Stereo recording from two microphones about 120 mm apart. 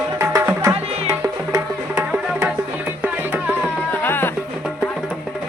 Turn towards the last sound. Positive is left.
turn(degrees=15)  # may be behind; listen again after turning